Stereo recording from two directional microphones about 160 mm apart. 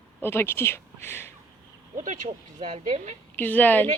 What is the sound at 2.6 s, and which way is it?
Speech, 40° right (ahead or behind).